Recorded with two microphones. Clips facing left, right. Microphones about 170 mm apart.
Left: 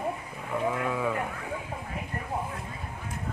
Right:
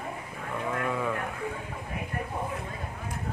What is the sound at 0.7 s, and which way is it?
Sheep, 5° left (ahead or behind).